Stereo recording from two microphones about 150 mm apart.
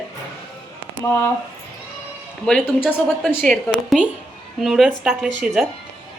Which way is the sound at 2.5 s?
5° left (ahead or behind).